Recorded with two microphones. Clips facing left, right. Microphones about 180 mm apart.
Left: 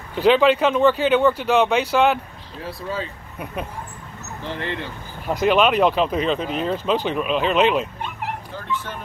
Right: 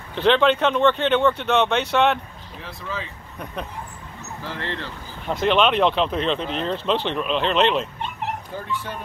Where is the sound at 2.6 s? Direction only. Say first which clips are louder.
Left 4 dB; 35° left (ahead or behind).